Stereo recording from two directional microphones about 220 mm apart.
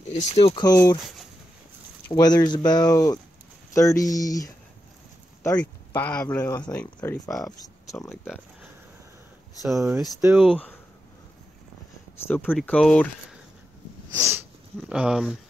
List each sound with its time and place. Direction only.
0.1 s speech: 30° left (ahead or behind)
2.0 s speech: 20° left (ahead or behind); by 7.5 s centre (ahead or behind)
7.6 s a sound: 15° left (ahead or behind)
9.6 s speech: centre (ahead or behind)
10.5 s speech: 5° left (ahead or behind)
12.3 s speech: 10° left (ahead or behind)
14.2 s sniff: centre (ahead or behind)